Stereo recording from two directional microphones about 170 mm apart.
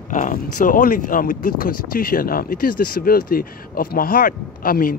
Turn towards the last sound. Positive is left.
turn(degrees=55)  # may be behind; listen again after turning